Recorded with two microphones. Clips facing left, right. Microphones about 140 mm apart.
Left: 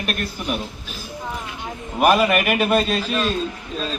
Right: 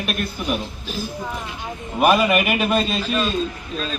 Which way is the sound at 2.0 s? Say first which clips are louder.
Even; centre (ahead or behind).